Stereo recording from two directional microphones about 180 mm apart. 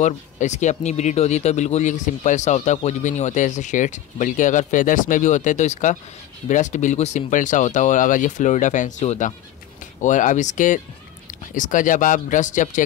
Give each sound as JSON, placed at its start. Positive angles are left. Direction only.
{"t": 0.0, "sound": "speech", "side_deg": 40}